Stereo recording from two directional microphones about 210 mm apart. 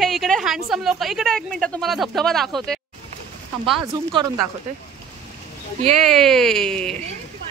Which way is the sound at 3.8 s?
25° right (ahead or behind).